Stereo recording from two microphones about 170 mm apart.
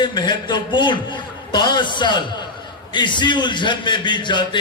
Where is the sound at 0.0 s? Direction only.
25° left (ahead or behind).